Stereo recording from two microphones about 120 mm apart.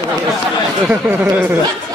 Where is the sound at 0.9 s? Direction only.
15° right (ahead or behind).